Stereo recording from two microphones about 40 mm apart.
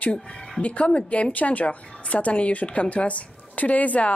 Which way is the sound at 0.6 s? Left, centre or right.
Left.